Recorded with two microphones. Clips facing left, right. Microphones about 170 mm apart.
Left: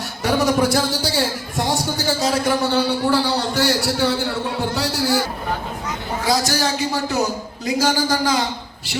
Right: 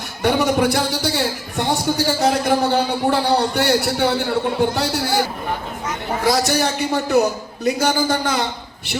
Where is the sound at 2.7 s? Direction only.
60° right (ahead or behind).